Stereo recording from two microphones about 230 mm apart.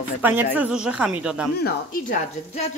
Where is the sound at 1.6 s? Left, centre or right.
Left.